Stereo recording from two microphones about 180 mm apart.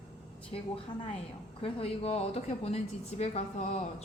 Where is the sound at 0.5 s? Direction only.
30° left (ahead or behind).